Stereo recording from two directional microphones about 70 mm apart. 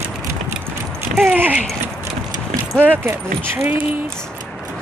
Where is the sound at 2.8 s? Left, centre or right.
Right.